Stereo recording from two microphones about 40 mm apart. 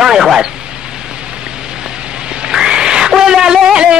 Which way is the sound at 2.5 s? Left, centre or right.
Centre.